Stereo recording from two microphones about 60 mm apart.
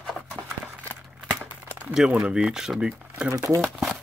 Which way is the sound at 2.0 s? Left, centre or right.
Centre.